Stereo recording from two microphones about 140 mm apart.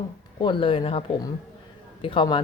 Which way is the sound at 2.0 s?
35° left (ahead or behind).